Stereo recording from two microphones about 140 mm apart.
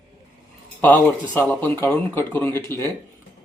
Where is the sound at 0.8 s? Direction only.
10° left (ahead or behind).